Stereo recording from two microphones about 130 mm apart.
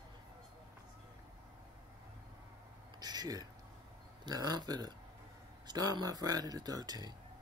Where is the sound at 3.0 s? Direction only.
30° right (ahead or behind).